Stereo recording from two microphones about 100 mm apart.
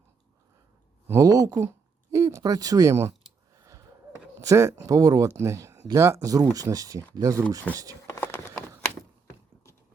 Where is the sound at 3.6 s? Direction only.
35° right (ahead or behind).